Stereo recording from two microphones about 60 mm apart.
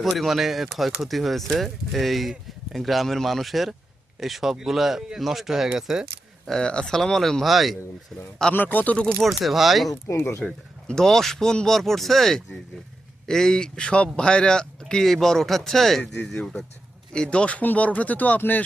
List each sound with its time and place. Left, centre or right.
0.0 s speech: centre
6.5 s speech: centre
8.5 s speech: left
9.1 s speech: centre
10.2 s speech: left
10.4 s speech: centre; by 18.6 s left